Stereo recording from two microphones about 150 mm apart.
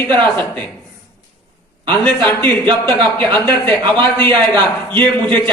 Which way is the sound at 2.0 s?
10° left (ahead or behind).